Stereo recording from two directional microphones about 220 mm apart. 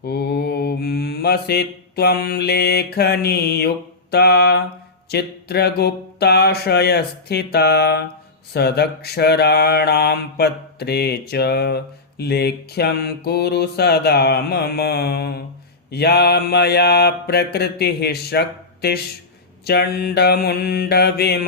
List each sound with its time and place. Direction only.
0.0 s mantra: 45° left (ahead or behind)